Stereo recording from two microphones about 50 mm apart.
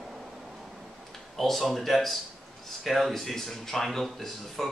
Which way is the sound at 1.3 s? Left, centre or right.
Centre.